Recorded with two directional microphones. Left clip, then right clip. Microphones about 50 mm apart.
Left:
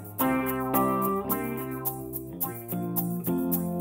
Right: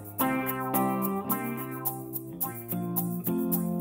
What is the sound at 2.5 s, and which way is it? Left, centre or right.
Music, left.